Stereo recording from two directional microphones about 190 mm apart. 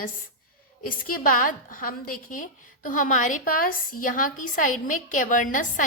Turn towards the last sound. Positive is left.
turn(degrees=45)  # may be behind; listen again after turning